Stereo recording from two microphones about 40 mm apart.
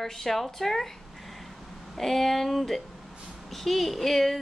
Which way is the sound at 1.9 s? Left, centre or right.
Centre.